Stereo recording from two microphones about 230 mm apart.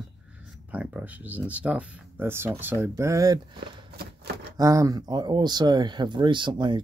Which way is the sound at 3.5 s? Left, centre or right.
Right.